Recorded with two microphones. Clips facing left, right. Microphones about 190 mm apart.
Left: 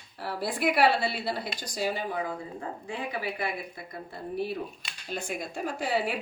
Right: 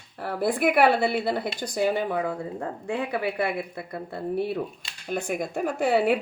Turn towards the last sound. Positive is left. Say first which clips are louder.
# right 7 dB
turn(degrees=-60)  # may be behind; listen again after turning